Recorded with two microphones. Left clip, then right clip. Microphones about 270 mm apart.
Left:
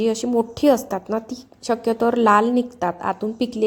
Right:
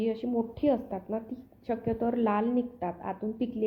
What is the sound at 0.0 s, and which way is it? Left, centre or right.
A woman's voice, left.